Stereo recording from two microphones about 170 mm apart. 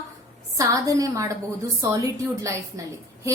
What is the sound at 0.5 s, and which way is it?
A woman's voice, 20° right (ahead or behind).